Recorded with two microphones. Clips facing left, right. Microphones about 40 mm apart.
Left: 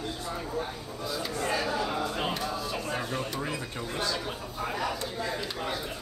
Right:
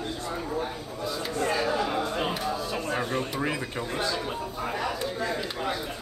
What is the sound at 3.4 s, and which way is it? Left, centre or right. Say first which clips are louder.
Speech: right 4 dB; right.